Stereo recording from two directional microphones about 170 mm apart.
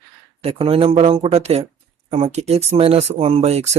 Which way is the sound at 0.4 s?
35° right (ahead or behind).